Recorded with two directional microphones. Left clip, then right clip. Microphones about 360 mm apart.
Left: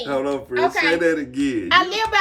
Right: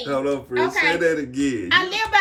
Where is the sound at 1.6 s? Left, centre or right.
Centre.